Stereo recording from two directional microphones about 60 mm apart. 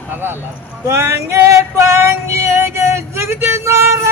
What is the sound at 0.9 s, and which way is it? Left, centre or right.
Female singing, right.